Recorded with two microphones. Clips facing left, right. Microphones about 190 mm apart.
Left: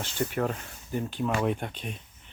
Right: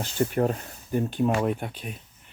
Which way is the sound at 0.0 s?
35° right (ahead or behind).